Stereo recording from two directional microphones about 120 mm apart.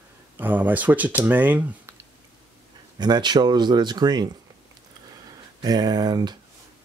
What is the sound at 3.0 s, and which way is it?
Speech, 35° right (ahead or behind).